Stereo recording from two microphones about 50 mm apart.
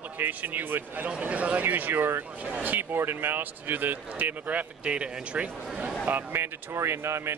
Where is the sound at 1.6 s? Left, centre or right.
Right.